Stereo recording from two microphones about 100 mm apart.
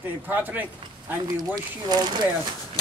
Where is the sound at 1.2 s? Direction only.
40° right (ahead or behind).